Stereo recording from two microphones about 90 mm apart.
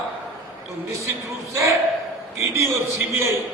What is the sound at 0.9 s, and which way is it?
A man's voice, 35° right (ahead or behind).